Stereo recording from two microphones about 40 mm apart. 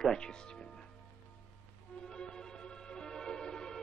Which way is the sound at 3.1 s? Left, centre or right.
Centre.